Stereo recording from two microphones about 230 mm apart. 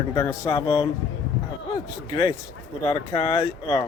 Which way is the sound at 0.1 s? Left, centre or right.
Centre.